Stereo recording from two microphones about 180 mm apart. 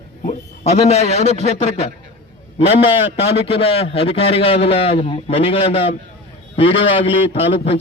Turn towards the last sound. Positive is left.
turn(degrees=35)  # may be behind; listen again after turning